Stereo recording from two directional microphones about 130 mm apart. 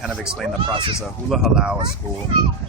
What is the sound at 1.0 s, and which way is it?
Speech, 5° right (ahead or behind).